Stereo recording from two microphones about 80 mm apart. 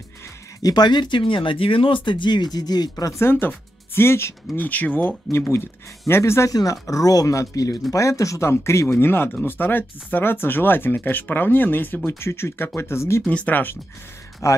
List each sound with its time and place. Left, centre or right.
0.6 s speech: left
3.1 s speech: left
4.6 s speech: left
6.5 s speech: left
13.3 s speech: centre
14.4 s speech: left